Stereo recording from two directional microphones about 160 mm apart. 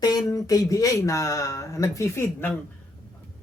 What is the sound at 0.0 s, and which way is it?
Speech, 25° left (ahead or behind).